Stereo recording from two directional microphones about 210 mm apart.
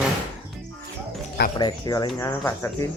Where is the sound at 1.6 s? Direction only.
20° left (ahead or behind).